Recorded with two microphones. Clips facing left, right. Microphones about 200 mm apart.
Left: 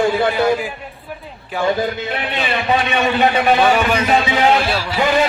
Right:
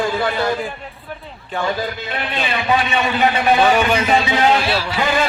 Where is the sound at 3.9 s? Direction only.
Centre (ahead or behind).